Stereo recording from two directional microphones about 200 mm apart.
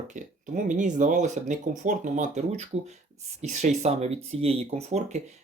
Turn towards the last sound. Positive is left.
turn(degrees=-35)  # may be behind; listen again after turning